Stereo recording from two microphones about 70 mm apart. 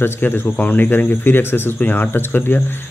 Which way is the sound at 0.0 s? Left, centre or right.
Left.